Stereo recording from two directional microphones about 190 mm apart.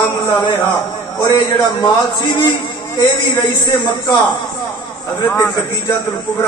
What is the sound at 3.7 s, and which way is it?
Speech, 25° left (ahead or behind).